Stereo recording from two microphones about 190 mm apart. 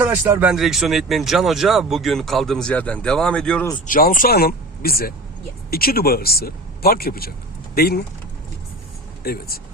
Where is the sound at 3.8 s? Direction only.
45° left (ahead or behind).